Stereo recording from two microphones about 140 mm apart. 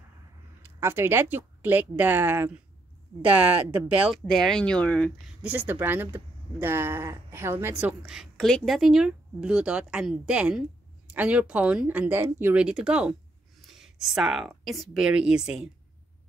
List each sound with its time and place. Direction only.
0.7 s speech: 15° right (ahead or behind)
4.3 s speech: 5° left (ahead or behind)
5.4 s speech: 15° right (ahead or behind)
8.0 s speech: centre (ahead or behind)